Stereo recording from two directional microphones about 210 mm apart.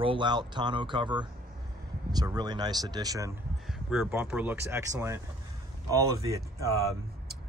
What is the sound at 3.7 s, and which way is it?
Speech, 5° right (ahead or behind).